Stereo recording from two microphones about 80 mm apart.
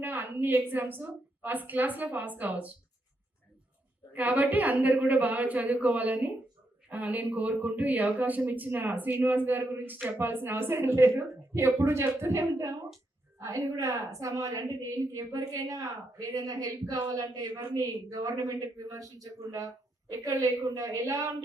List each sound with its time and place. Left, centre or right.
0.0 s speech: right
4.1 s a woman's voice: centre; by 21.3 s right